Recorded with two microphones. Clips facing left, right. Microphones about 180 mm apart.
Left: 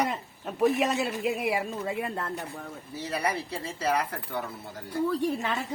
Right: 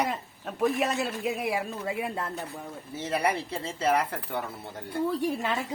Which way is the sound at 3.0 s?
25° right (ahead or behind).